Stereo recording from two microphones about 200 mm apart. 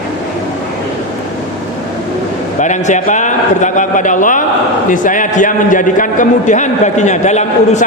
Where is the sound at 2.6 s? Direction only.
35° left (ahead or behind).